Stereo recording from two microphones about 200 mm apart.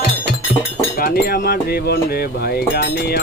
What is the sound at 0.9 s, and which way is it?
Speech, 50° left (ahead or behind).